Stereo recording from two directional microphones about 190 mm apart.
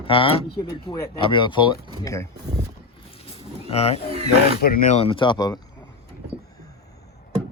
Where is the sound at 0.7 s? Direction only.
15° left (ahead or behind).